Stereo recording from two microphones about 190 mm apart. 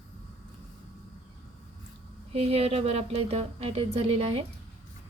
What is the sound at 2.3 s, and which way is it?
Speech, 30° right (ahead or behind).